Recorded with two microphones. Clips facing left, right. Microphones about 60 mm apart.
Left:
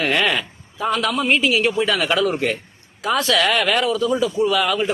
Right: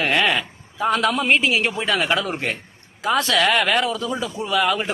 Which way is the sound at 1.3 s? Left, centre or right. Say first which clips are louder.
Left 1 dB; right.